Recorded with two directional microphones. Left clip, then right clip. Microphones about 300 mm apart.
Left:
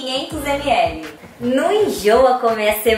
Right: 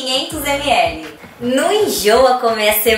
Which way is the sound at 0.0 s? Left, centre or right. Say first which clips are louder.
Right 4 dB; centre.